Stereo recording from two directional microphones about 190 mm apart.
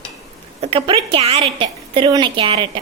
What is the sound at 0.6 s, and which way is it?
A woman's voice, 30° right (ahead or behind).